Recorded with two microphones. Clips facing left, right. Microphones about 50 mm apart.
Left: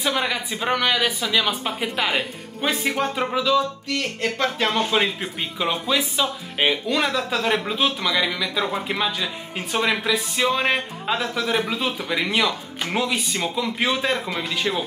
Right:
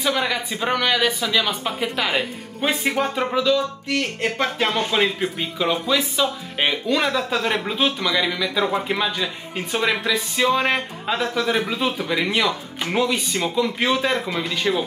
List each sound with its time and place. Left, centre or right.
0.0 s speech: centre
2.7 s speech: centre
3.3 s speech: centre
3.9 s speech: right
4.6 s speech: centre